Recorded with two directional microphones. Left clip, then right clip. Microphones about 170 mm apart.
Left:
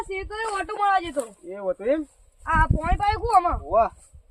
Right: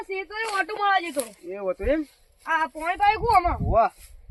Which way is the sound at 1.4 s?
15° left (ahead or behind).